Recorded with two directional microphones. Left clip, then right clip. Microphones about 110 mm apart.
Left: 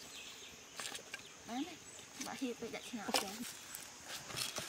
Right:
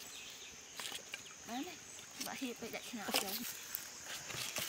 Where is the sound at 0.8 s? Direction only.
10° left (ahead or behind).